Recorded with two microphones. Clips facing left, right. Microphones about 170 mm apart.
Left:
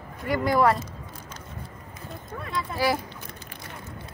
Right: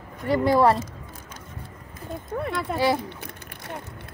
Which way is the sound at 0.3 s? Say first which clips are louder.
Right 3 dB; 30° right (ahead or behind).